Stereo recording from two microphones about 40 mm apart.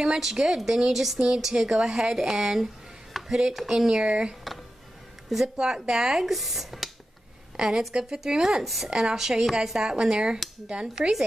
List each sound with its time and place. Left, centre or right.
0.0 s speech: centre
0.9 s speech: centre
1.2 s speech: centre
5.3 s speech: centre
7.5 s a woman's voice: centre